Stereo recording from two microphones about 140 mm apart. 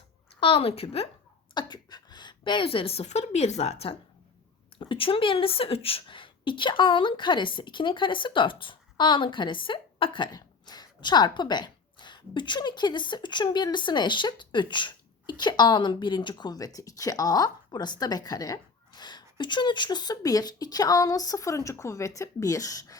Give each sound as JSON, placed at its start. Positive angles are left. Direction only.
{"t": 0.3, "sound": "a woman's voice", "side_deg": 40}
{"t": 1.5, "sound": "a woman's voice", "side_deg": 30}